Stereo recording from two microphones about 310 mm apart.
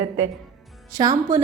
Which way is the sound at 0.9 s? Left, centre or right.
Centre.